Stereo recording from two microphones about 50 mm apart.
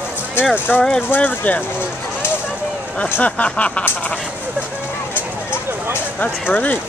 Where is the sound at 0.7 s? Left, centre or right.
Left.